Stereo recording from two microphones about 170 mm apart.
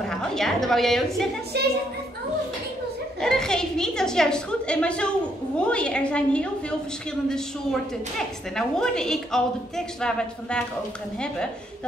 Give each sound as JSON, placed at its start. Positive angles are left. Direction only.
{"t": 0.0, "sound": "a woman's voice", "side_deg": 5}
{"t": 1.5, "sound": "a child's voice", "side_deg": -75}
{"t": 3.2, "sound": "a woman's voice", "side_deg": 5}